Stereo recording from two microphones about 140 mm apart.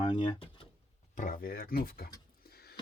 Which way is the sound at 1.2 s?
75° left (ahead or behind).